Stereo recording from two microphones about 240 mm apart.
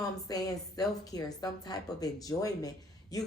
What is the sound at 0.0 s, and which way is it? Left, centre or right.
A woman's voice, centre.